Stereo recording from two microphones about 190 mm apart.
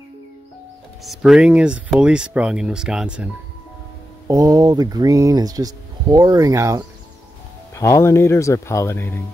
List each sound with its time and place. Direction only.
1.0 s speech: centre (ahead or behind)
4.3 s speech: 20° right (ahead or behind)
7.7 s speech: 15° left (ahead or behind)